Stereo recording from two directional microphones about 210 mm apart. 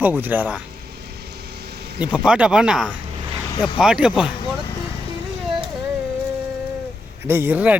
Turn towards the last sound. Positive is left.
turn(degrees=-5)  # may be behind; listen again after turning